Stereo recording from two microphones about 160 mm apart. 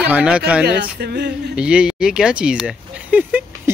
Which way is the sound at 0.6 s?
90° right.